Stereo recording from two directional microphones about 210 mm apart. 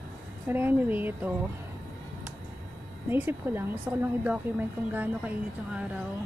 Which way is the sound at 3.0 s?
10° right (ahead or behind).